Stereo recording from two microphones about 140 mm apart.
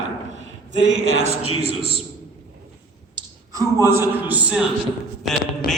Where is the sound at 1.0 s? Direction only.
50° right (ahead or behind).